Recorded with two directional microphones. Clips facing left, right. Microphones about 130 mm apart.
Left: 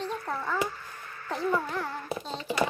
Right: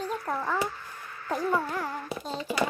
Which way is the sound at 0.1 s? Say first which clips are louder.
Right 2 dB; 10° right (ahead or behind).